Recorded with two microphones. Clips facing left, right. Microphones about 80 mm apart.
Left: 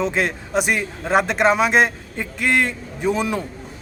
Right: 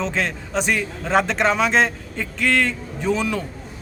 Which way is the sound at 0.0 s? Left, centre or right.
Centre.